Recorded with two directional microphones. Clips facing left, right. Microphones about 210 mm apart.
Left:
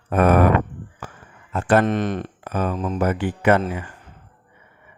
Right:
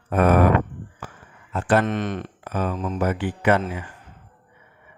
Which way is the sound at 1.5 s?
50° left (ahead or behind).